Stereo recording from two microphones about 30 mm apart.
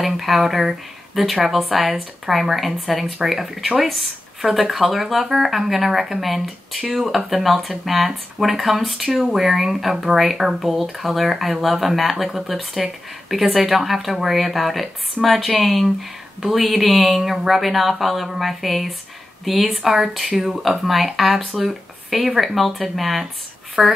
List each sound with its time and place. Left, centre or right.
0.0 s speech: centre
19.9 s speech: centre
23.8 s speech: right